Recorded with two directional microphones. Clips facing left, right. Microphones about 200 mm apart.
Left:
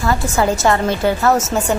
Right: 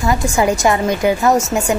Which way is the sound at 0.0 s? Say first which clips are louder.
Right 1 dB; 15° right (ahead or behind).